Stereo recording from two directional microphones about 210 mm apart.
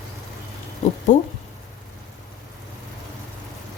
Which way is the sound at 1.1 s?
35° left (ahead or behind).